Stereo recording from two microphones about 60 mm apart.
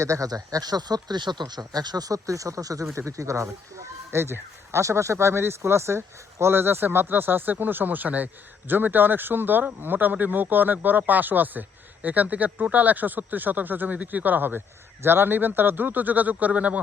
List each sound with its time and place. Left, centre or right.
0.0 s speech: right
2.9 s speech: right
4.1 s speech: right